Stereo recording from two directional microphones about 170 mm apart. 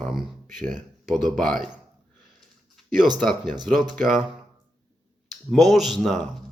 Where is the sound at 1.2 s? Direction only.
5° left (ahead or behind).